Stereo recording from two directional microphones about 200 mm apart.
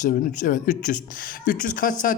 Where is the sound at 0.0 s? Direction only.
40° left (ahead or behind).